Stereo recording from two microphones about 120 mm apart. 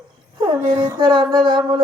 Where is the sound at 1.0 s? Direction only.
40° right (ahead or behind).